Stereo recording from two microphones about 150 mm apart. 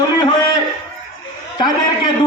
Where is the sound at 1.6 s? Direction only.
30° left (ahead or behind).